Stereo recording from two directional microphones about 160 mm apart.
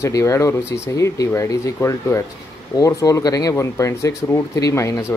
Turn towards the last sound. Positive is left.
turn(degrees=15)  # may be behind; listen again after turning